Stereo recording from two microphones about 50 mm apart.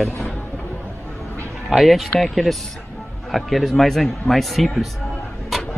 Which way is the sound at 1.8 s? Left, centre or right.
Centre.